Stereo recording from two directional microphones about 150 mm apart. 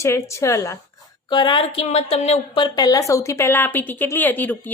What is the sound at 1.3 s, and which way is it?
A woman's voice, 30° left (ahead or behind).